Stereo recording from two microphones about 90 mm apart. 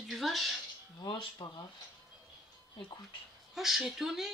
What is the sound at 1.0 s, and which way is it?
Speech, 50° left (ahead or behind).